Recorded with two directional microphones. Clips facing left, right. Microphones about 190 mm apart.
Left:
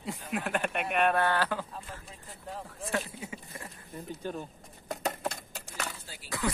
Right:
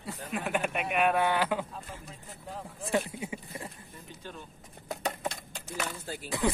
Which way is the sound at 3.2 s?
20° right (ahead or behind).